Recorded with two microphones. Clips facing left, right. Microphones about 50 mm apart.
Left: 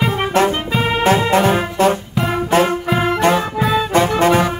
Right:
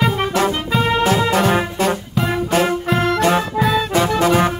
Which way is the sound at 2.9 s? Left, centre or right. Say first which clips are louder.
Right 1 dB; centre.